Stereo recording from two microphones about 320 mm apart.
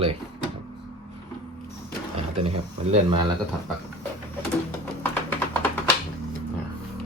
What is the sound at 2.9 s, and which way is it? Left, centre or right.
Speech, centre.